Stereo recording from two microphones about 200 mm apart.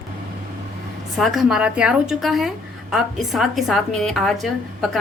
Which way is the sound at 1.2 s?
Centre (ahead or behind).